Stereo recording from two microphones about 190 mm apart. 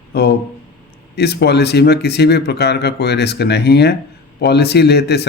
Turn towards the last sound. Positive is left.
turn(degrees=60)  # may be behind; listen again after turning